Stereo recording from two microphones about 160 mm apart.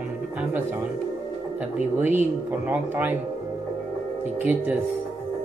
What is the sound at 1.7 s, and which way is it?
Speech, 10° right (ahead or behind).